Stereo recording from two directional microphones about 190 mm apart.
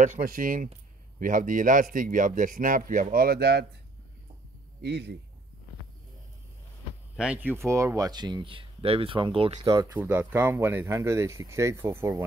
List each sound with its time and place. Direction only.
0.0 s speech: 45° right (ahead or behind)
4.8 s a man's voice: 60° right (ahead or behind)
7.2 s speech: 5° right (ahead or behind); by 9.6 s 30° right (ahead or behind)
9.7 s speech: 15° right (ahead or behind)